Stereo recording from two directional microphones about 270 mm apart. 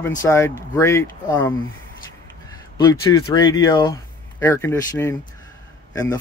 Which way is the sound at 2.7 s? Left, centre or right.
Centre.